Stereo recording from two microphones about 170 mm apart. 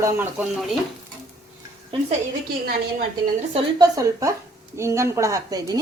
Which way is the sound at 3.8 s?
20° right (ahead or behind).